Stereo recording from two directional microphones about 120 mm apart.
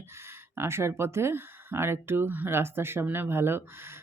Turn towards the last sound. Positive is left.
turn(degrees=-20)  # may be behind; listen again after turning